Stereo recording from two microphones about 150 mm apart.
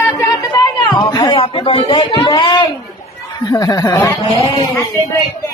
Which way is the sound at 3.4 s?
25° left (ahead or behind).